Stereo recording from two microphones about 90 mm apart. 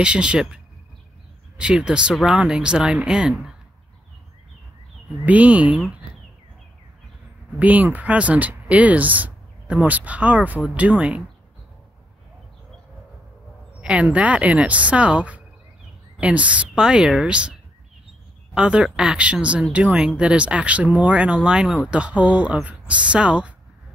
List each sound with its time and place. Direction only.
0.0 s speech: 10° right (ahead or behind)
1.6 s speech: 10° right (ahead or behind)
5.2 s speech: 15° right (ahead or behind)
7.5 s speech: 20° right (ahead or behind)
13.7 s speech: 15° right (ahead or behind)